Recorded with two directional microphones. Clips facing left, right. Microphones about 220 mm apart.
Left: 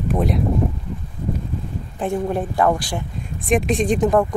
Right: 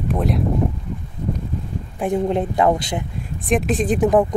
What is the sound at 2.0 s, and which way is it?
Speech, 20° right (ahead or behind).